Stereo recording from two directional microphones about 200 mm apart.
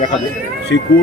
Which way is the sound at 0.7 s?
65° left (ahead or behind).